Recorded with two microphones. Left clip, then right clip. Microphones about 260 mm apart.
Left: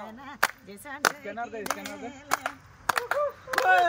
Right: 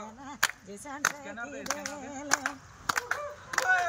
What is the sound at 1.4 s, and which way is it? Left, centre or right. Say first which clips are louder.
Speech: left 3 dB; left.